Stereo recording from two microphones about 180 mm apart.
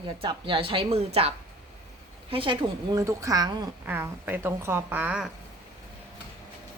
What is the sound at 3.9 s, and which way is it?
A woman's voice, 10° right (ahead or behind).